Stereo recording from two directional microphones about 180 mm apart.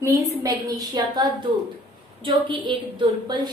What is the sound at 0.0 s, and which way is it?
A woman's voice, 20° right (ahead or behind).